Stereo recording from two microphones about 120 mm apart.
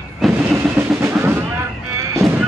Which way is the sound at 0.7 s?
20° right (ahead or behind).